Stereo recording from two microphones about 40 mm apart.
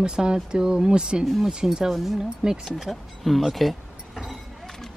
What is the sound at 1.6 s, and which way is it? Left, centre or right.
Speech, centre.